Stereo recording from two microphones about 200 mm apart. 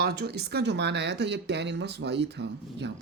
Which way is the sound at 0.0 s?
50° right (ahead or behind).